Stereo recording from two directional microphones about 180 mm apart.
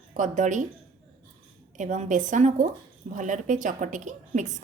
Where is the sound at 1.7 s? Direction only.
45° right (ahead or behind).